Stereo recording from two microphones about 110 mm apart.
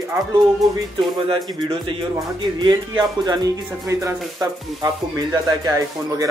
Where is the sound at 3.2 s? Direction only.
35° right (ahead or behind).